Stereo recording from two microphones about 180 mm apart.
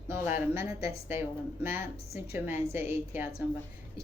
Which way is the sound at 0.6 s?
35° left (ahead or behind).